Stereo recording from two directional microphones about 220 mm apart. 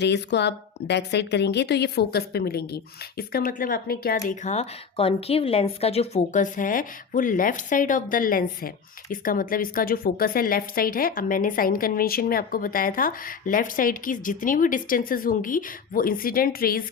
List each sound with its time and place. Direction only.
0.0 s a woman's voice: 50° left (ahead or behind)
4.3 s a woman's voice: 30° left (ahead or behind)